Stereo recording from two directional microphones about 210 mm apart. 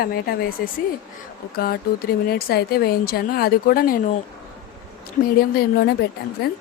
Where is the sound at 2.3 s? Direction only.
45° left (ahead or behind).